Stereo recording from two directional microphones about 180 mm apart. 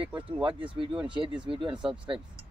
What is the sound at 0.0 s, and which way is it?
Speech, 30° right (ahead or behind).